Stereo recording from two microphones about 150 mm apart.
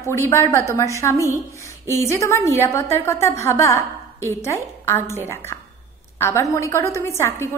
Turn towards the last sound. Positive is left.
turn(degrees=15)  # may be behind; listen again after turning